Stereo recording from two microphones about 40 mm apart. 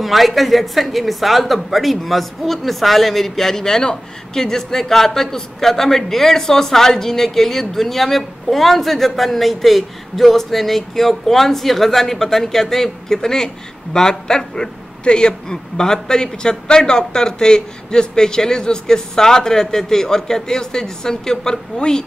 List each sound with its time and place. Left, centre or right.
0.0 s speech: centre